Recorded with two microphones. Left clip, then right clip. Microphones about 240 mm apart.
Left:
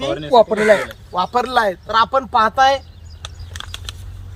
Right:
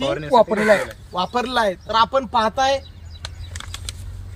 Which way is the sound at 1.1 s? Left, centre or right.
Centre.